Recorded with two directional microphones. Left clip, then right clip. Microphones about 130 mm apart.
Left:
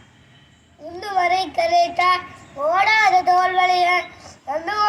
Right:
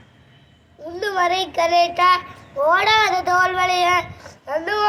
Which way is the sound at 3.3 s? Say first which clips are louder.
Left 1 dB; 15° right (ahead or behind).